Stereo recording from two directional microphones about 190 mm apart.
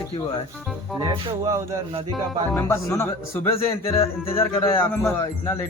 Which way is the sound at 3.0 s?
15° left (ahead or behind).